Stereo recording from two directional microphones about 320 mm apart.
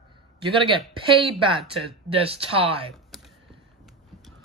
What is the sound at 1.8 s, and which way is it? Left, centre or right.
Speech, centre.